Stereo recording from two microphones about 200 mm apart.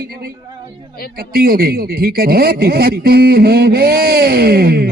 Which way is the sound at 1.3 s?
50° right (ahead or behind).